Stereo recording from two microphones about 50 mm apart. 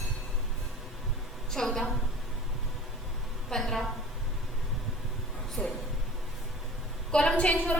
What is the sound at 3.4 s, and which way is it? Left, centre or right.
Speech, centre.